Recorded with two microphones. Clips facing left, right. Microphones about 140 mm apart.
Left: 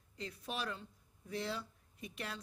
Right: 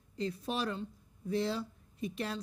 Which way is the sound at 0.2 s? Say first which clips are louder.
Right 8 dB; 30° right (ahead or behind).